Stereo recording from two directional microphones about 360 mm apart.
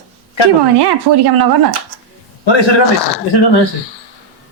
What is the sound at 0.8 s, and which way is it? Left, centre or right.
Speech, right.